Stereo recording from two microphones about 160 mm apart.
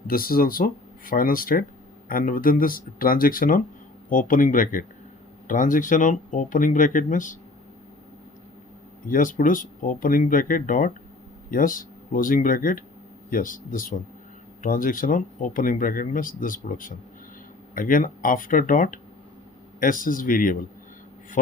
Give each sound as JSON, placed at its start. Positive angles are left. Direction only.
{"t": 0.1, "sound": "speech", "side_deg": 65}
{"t": 9.0, "sound": "speech", "side_deg": 60}